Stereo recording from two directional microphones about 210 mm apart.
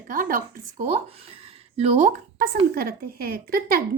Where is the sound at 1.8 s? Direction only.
30° right (ahead or behind).